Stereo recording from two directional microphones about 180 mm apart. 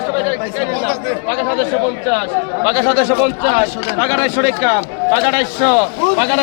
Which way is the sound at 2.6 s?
10° right (ahead or behind).